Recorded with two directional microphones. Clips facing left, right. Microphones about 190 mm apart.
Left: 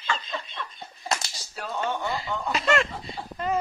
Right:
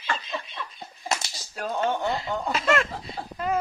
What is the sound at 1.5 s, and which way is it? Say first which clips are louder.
Speech: right 3 dB; 50° right (ahead or behind).